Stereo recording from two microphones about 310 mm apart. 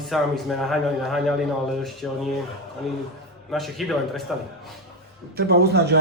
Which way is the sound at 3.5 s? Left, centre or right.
Centre.